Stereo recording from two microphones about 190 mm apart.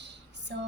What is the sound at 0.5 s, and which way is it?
Speech, 65° right (ahead or behind).